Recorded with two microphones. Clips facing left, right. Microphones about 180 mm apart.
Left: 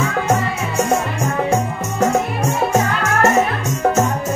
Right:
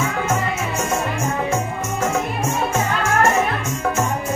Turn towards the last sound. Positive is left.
turn(degrees=35)  # may be behind; listen again after turning